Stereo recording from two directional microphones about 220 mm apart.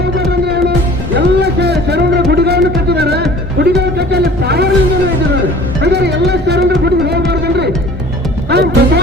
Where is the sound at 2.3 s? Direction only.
45° right (ahead or behind).